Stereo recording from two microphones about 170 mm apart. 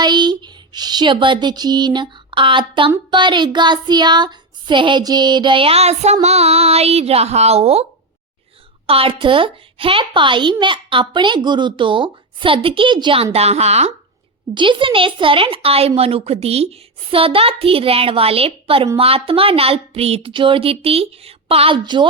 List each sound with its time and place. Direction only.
0.0 s a sound: 25° right (ahead or behind)
3.1 s a woman's voice: 25° right (ahead or behind)
8.9 s a woman's voice: 35° right (ahead or behind)
13.3 s a woman's voice: 40° right (ahead or behind)